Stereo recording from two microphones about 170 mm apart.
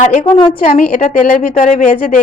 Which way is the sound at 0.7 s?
50° left (ahead or behind).